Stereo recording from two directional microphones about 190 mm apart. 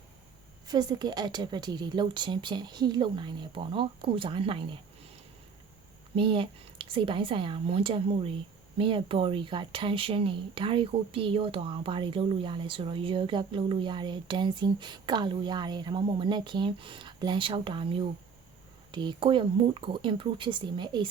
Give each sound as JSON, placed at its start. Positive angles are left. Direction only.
{"t": 0.7, "sound": "speech", "side_deg": -20}
{"t": 6.1, "sound": "speech", "side_deg": -30}